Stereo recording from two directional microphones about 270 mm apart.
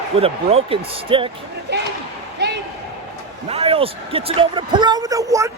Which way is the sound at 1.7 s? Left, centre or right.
Right.